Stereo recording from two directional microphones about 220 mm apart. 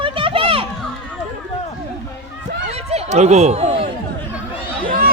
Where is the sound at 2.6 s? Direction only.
30° right (ahead or behind).